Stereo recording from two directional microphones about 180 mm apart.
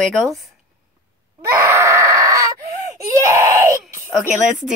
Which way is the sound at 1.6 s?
15° right (ahead or behind).